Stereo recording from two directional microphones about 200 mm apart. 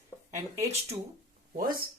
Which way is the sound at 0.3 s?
15° right (ahead or behind).